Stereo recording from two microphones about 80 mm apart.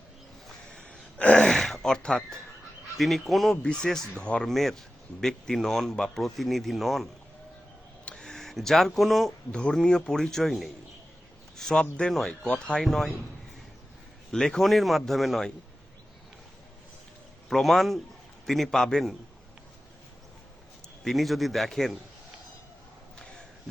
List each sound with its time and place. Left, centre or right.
0.4 s a sound: centre
1.5 s a sound: centre
3.0 s speech: centre
4.4 s speech: centre
14.3 s speech: centre
17.5 s speech: centre
21.0 s speech: centre